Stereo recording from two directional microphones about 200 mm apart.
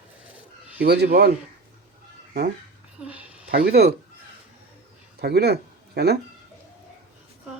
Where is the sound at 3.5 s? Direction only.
50° right (ahead or behind).